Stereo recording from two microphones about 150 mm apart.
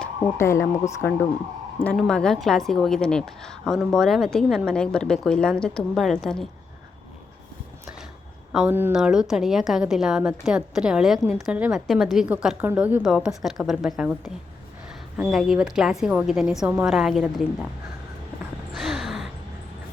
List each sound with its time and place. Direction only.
0.3 s speech: 15° left (ahead or behind)
1.8 s a woman's voice: 5° left (ahead or behind)
8.5 s a woman's voice: 10° right (ahead or behind)
18.7 s a sound: centre (ahead or behind)